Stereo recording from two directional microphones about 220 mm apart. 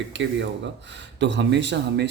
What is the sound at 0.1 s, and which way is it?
Speech, 55° right (ahead or behind).